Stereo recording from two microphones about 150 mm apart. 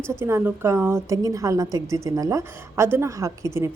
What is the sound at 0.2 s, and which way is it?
Speech, 15° right (ahead or behind).